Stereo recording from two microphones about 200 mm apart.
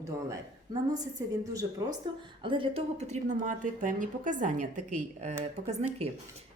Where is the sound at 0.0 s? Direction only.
15° right (ahead or behind).